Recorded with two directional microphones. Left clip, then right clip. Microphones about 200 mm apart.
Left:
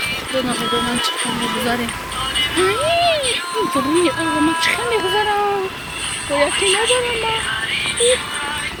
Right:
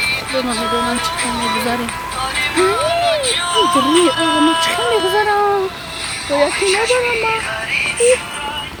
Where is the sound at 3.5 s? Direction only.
40° right (ahead or behind).